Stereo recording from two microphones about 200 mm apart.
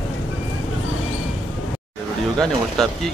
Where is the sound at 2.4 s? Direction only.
Centre (ahead or behind).